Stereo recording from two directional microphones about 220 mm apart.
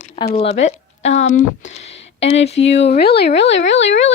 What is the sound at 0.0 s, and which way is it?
Speech, 30° left (ahead or behind).